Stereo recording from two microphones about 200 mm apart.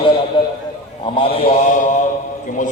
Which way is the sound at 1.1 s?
25° left (ahead or behind).